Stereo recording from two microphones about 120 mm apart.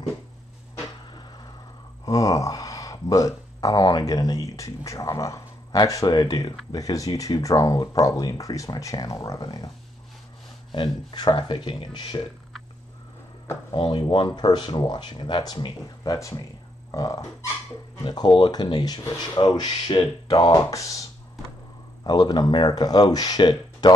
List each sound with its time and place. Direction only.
2.0 s speech: 30° left (ahead or behind)
10.7 s speech: 40° left (ahead or behind)
13.7 s speech: 45° left (ahead or behind)